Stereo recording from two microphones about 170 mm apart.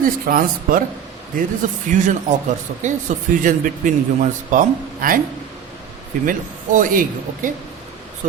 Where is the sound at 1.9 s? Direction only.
45° right (ahead or behind).